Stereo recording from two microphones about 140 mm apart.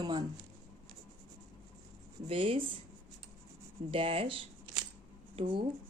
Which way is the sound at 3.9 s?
40° right (ahead or behind).